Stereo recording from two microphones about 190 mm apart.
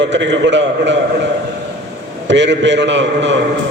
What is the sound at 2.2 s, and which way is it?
A man's voice, 70° right (ahead or behind).